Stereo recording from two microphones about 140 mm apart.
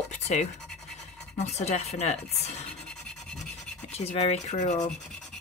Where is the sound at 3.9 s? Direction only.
50° left (ahead or behind).